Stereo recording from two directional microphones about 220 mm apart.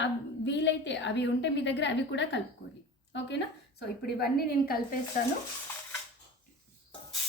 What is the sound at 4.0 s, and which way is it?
Speech, 45° left (ahead or behind).